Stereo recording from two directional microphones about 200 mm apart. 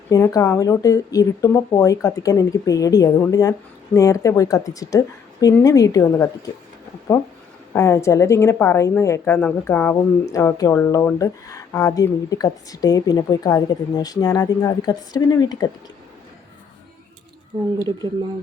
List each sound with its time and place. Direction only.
0.1 s a woman's voice: 15° left (ahead or behind)
7.7 s a woman's voice: 15° left (ahead or behind)